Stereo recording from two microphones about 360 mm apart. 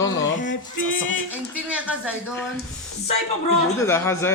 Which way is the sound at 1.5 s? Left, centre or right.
Centre.